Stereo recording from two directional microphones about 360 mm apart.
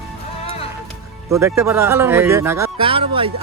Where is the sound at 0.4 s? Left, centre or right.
Centre.